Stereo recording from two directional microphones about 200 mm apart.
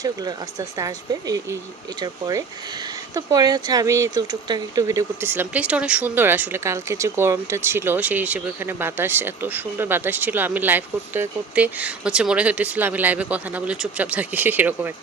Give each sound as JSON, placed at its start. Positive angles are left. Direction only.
{"t": 0.0, "sound": "speech", "side_deg": -20}